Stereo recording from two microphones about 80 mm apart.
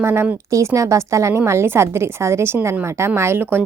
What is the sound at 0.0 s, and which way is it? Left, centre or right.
A woman's voice, right.